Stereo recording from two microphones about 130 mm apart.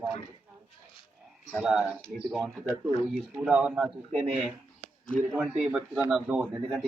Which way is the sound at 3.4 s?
5° right (ahead or behind).